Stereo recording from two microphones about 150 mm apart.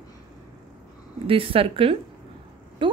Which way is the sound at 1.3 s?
40° right (ahead or behind).